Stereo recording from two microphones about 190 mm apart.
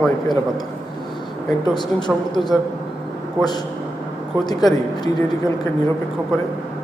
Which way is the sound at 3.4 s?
20° left (ahead or behind).